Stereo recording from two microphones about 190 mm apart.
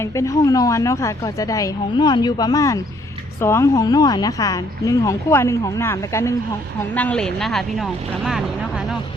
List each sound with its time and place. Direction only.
0.0 s speech: 15° left (ahead or behind); by 8.4 s 5° right (ahead or behind)